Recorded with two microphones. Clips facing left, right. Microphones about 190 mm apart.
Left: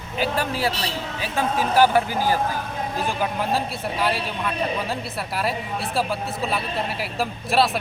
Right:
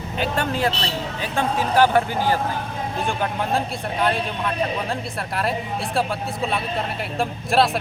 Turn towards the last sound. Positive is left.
turn(degrees=0)  # may be behind; listen again after turning